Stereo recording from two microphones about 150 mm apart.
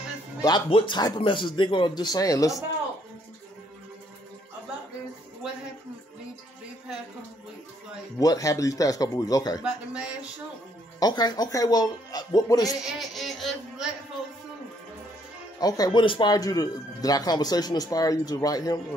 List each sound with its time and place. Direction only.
0.4 s speech: 30° left (ahead or behind)
8.2 s speech: 25° left (ahead or behind)
9.6 s a man's voice: 5° right (ahead or behind)
11.0 s speech: 25° left (ahead or behind)
12.7 s a sound: centre (ahead or behind)
15.6 s speech: 25° left (ahead or behind)